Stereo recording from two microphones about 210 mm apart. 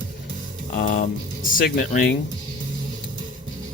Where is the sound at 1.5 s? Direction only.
45° left (ahead or behind).